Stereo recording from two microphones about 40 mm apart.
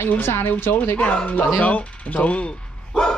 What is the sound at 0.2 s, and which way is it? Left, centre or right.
Speech, left.